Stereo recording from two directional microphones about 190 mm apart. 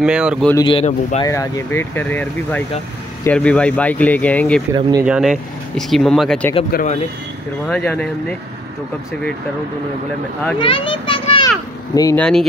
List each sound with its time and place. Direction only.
0.0 s speech: 5° right (ahead or behind)
0.7 s speech: 30° left (ahead or behind)
1.2 s speech: 15° left (ahead or behind)
6.7 s speech: 45° left (ahead or behind)
7.6 s speech: 5° left (ahead or behind)
10.6 s a child's voice: 25° left (ahead or behind)
12.2 s speech: 5° left (ahead or behind)